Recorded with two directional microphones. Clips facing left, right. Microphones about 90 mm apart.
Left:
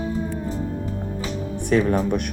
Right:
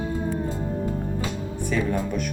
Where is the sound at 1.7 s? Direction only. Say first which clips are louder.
Left 6 dB; 65° left (ahead or behind).